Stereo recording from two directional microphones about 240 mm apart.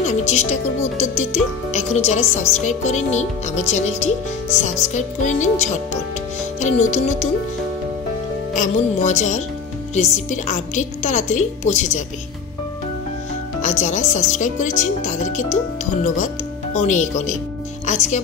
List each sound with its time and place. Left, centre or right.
0.0 s speech: left
6.6 s speech: left
8.5 s speech: left
13.6 s speech: left